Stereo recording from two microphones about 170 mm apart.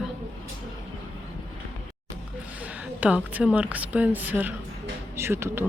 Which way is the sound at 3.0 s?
10° right (ahead or behind).